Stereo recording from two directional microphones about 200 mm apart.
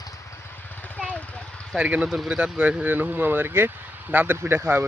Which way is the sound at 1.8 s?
5° right (ahead or behind).